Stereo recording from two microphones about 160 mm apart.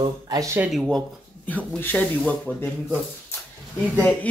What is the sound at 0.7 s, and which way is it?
Speech, centre (ahead or behind).